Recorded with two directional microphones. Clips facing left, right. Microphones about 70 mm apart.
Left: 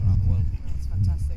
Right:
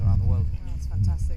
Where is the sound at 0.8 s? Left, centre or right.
Centre.